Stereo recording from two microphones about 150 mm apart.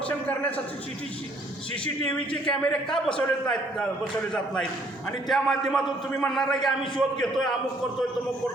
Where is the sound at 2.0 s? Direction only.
10° left (ahead or behind).